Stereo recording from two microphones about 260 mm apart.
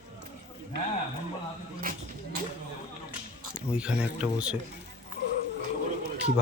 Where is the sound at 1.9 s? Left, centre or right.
Right.